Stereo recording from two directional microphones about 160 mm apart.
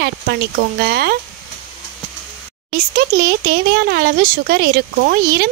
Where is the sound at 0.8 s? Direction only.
80° right.